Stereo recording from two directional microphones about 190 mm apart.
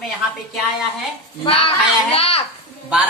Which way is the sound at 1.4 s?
30° left (ahead or behind).